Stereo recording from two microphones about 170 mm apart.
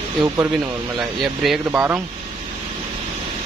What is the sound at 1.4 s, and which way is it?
Speech, 10° right (ahead or behind).